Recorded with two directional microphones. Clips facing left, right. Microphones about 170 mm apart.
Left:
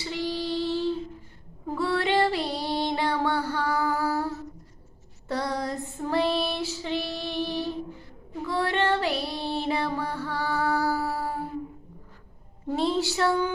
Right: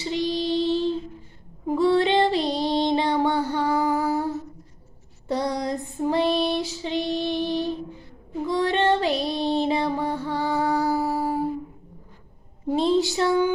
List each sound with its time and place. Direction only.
0.0 s female singing: 20° right (ahead or behind)
5.3 s child singing: 15° right (ahead or behind)
8.4 s music: 20° right (ahead or behind)
12.6 s a sound: 15° right (ahead or behind)